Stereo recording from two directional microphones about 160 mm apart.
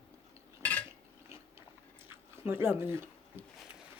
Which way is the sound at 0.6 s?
10° left (ahead or behind).